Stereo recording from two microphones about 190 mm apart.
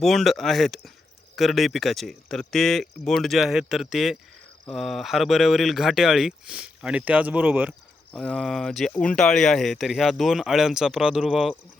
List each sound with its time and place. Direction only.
0.0 s speech: centre (ahead or behind)
8.1 s speech: centre (ahead or behind)